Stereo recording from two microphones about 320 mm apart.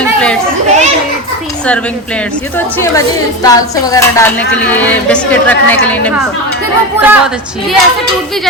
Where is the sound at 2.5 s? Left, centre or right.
Centre.